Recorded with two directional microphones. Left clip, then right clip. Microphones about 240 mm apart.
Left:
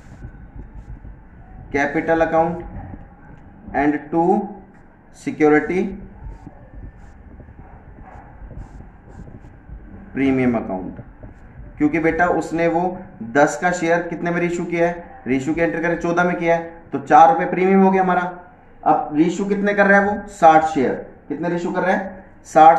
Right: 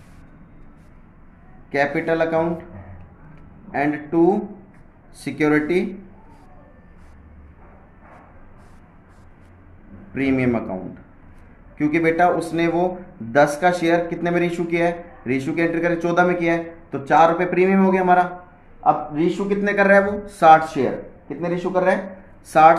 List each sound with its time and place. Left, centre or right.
1.7 s speech: right
3.7 s speech: right
10.1 s speech: right
11.8 s speech: right
19.1 s speech: centre
19.7 s speech: right
21.4 s speech: right
22.5 s speech: right